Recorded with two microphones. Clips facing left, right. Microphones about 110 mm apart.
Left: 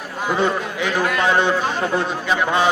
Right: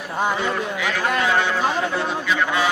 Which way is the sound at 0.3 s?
30° left (ahead or behind).